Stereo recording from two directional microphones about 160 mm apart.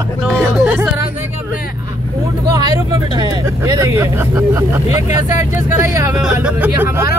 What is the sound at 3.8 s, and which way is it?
Speech, 20° right (ahead or behind).